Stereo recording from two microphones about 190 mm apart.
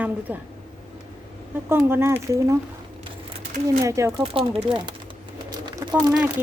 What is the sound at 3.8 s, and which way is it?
Speech, 15° right (ahead or behind).